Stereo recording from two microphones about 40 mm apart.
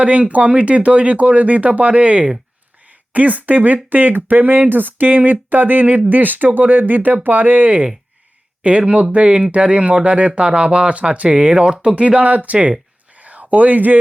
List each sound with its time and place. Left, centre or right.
0.0 s speech: right
8.6 s speech: right
13.2 s a sound: right